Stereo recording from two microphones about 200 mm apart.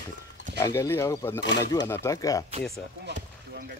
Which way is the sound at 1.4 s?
60° left (ahead or behind).